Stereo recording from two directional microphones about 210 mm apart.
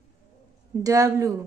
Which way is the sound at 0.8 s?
15° right (ahead or behind).